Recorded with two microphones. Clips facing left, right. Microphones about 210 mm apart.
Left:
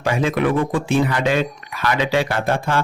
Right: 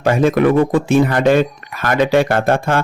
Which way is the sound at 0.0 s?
45° right (ahead or behind).